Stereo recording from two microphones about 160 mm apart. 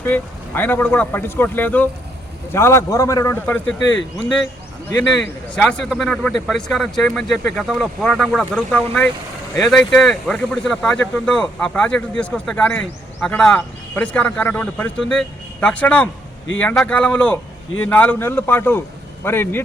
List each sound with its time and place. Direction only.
0.0 s speech: 10° left (ahead or behind)
5.5 s speech: 5° left (ahead or behind)
9.6 s speech: 5° left (ahead or behind)